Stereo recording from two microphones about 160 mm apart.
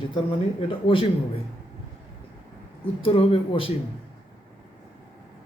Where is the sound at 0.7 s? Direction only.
35° left (ahead or behind).